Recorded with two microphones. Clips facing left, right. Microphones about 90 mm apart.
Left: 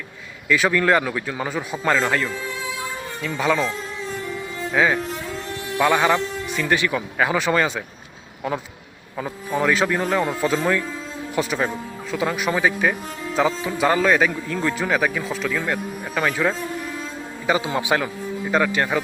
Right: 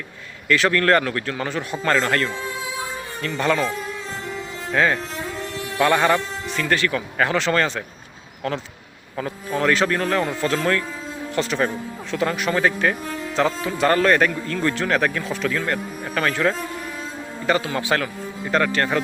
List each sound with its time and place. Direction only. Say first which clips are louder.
0.4 s a man's voice: even; 10° left (ahead or behind)
4.7 s a man's voice: even; 10° left (ahead or behind)